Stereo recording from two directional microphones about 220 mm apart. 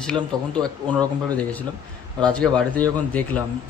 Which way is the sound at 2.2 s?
5° left (ahead or behind).